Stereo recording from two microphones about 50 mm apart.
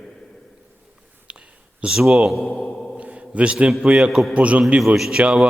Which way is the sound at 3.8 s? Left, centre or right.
Right.